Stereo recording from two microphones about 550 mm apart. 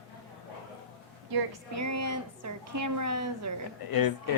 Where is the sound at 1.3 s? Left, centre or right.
Right.